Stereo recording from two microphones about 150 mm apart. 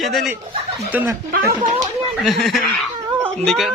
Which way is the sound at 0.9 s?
10° right (ahead or behind).